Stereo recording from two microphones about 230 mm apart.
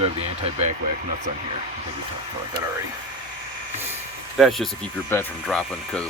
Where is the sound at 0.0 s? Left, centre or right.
Right.